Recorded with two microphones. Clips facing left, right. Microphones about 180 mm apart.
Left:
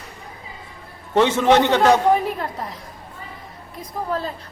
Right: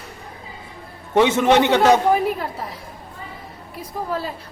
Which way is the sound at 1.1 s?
15° right (ahead or behind).